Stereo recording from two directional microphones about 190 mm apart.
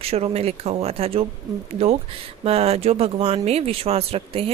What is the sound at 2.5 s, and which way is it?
A woman's voice, 35° right (ahead or behind).